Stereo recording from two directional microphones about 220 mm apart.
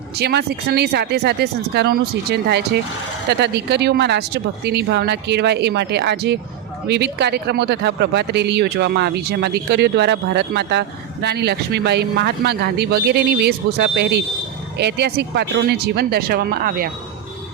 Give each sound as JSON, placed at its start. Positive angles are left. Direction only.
{"t": 0.2, "sound": "speech", "side_deg": -45}